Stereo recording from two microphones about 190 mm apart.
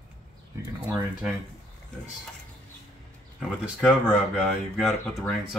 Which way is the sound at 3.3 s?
5° right (ahead or behind).